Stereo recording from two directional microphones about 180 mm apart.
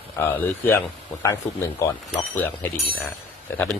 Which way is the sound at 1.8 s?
15° left (ahead or behind).